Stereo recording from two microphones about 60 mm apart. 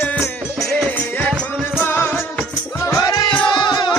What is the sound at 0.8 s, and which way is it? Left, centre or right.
Music, left.